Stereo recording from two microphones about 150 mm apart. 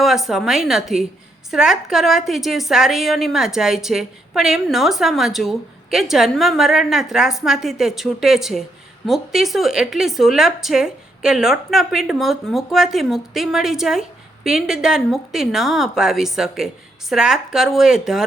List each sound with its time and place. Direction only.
0.0 s a woman's voice: centre (ahead or behind)